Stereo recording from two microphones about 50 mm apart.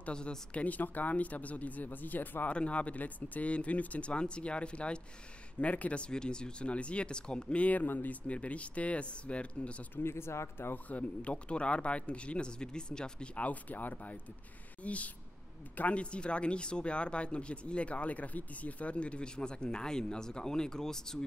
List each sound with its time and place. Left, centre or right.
0.1 s speech: centre; by 2.5 s left
2.5 s speech: left
10.0 s speech: left
10.7 s speech: left; by 21.3 s centre